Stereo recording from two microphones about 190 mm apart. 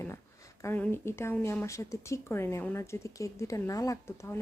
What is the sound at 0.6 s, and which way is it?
A woman's voice, 10° left (ahead or behind).